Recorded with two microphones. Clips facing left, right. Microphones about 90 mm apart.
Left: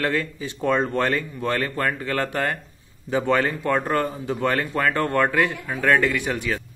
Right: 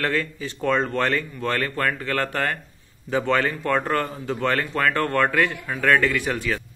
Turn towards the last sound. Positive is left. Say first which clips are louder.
# even
turn(degrees=20)  # may be behind; listen again after turning